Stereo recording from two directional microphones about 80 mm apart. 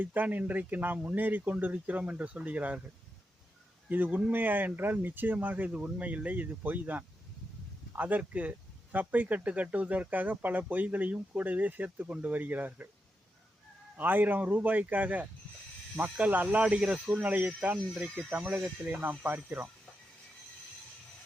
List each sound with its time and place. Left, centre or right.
0.0 s speech: right
3.8 s speech: right
13.9 s speech: right
17.8 s speech: centre
18.3 s speech: centre